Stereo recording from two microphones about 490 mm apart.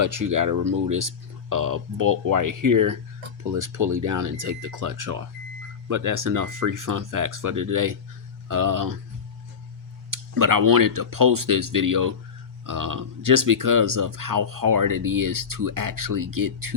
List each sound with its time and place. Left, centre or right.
0.0 s speech: right
10.1 s speech: right